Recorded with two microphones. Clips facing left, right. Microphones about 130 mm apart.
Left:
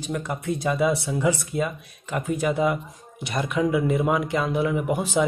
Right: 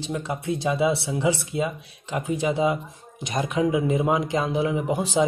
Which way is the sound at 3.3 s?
40° right (ahead or behind).